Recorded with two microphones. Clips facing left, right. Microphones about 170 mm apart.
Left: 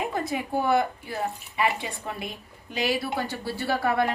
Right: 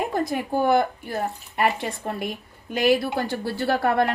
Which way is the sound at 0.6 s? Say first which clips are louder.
Right 4 dB; 45° right (ahead or behind).